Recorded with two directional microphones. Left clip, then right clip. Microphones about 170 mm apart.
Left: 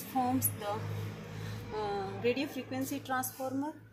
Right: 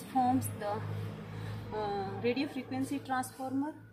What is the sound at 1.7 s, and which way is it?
A woman's voice, 20° right (ahead or behind).